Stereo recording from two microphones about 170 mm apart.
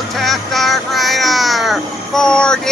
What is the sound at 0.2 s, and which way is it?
Meow, centre (ahead or behind).